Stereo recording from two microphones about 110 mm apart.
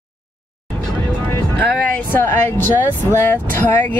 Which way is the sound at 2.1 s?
20° left (ahead or behind).